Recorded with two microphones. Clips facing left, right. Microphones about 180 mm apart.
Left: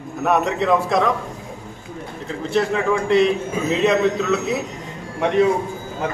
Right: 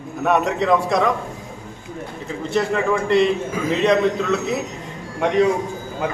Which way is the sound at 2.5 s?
Centre (ahead or behind).